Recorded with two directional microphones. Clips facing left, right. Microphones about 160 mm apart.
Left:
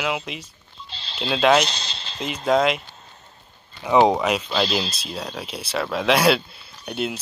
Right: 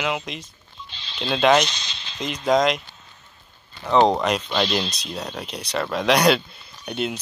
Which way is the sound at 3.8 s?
10° left (ahead or behind).